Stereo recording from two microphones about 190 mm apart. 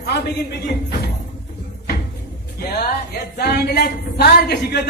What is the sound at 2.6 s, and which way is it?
A man's voice, 55° left (ahead or behind).